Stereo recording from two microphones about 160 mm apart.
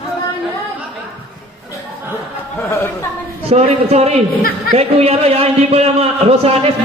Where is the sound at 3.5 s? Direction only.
40° right (ahead or behind).